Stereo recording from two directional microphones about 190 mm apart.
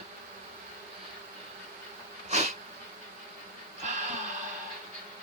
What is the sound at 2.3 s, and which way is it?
Insect, 35° right (ahead or behind).